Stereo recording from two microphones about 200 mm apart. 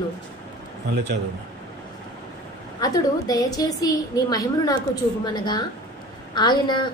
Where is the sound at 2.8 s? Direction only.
20° left (ahead or behind).